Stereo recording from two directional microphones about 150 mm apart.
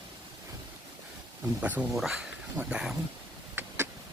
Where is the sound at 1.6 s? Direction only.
10° right (ahead or behind).